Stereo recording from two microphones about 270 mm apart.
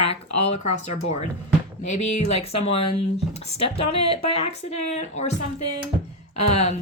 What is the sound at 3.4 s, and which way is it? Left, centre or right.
Speech, left.